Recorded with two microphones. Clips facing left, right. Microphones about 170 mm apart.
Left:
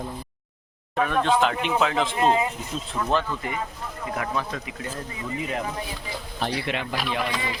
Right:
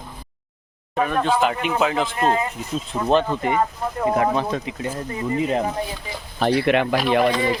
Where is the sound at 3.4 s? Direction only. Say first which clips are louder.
Right 10 dB; 80° right.